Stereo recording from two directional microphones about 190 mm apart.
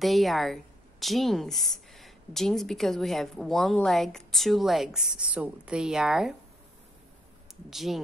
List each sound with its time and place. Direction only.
0.0 s a woman's voice: centre (ahead or behind)
7.7 s a woman's voice: centre (ahead or behind)